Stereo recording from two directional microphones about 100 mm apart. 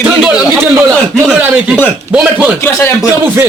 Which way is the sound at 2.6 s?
25° left (ahead or behind).